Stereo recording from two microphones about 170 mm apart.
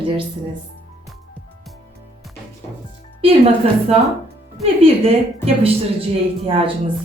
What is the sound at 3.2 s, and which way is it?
Speech, 35° right (ahead or behind).